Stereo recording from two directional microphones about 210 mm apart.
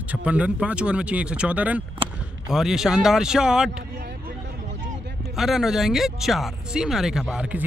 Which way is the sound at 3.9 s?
50° right (ahead or behind).